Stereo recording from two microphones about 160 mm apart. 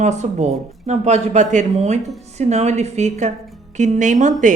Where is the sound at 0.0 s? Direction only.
45° right (ahead or behind).